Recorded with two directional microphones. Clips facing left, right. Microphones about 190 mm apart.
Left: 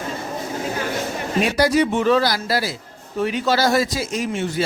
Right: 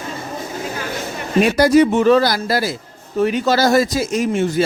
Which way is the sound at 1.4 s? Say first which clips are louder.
Right 6 dB; 50° right (ahead or behind).